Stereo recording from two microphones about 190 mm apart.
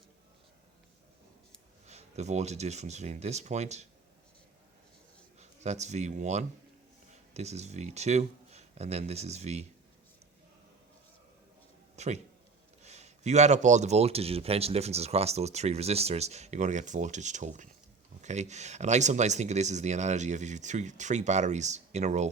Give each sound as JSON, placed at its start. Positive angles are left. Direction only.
{"t": 1.9, "sound": "speech", "side_deg": -35}
{"t": 5.4, "sound": "speech", "side_deg": -35}
{"t": 11.9, "sound": "speech", "side_deg": -35}